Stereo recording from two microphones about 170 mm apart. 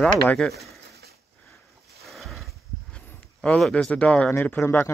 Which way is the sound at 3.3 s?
5° left (ahead or behind).